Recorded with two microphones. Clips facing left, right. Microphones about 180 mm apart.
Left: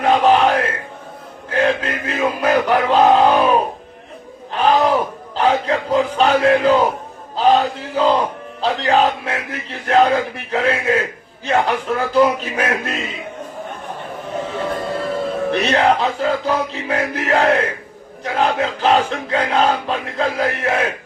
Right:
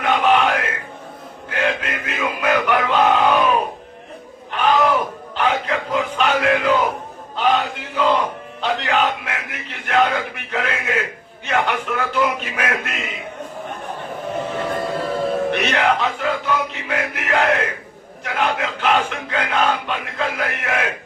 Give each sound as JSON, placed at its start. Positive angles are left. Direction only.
{"t": 0.0, "sound": "music", "side_deg": 35}
{"t": 1.5, "sound": "a man's voice", "side_deg": 35}
{"t": 4.5, "sound": "a sound", "side_deg": 35}
{"t": 7.3, "sound": "battle cry", "side_deg": 35}
{"t": 8.6, "sound": "a man's voice", "side_deg": 35}
{"t": 15.5, "sound": "a man's voice", "side_deg": 35}